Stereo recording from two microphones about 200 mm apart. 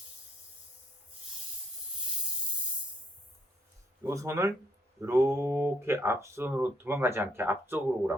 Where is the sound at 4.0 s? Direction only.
15° right (ahead or behind).